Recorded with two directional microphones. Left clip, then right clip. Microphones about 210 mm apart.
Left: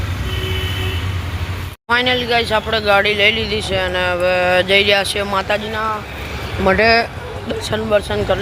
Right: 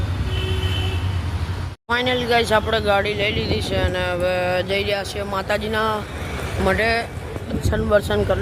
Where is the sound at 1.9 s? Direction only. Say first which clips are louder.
Left 4 dB; 5° right (ahead or behind).